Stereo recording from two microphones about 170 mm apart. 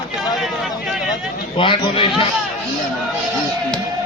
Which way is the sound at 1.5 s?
30° left (ahead or behind).